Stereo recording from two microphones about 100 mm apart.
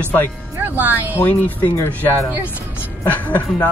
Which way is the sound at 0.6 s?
20° right (ahead or behind).